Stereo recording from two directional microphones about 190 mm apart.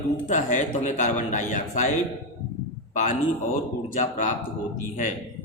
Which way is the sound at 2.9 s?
45° left (ahead or behind).